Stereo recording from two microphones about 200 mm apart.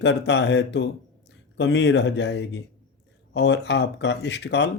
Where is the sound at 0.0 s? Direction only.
60° left (ahead or behind).